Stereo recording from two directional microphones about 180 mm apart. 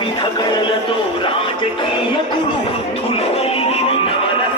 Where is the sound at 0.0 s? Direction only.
25° left (ahead or behind).